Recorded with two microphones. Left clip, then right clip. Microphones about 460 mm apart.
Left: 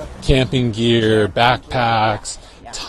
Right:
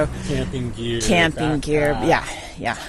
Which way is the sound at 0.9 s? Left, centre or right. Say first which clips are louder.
Left 2 dB; left.